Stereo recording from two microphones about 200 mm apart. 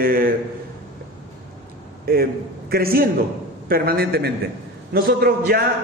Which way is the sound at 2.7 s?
50° right (ahead or behind).